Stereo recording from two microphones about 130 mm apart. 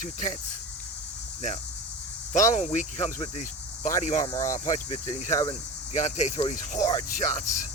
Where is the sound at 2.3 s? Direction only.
65° left (ahead or behind).